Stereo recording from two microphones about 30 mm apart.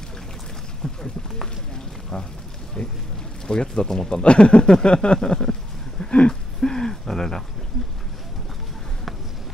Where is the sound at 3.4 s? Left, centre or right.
Left.